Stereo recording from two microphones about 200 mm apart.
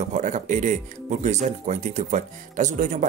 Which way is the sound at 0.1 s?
40° right (ahead or behind).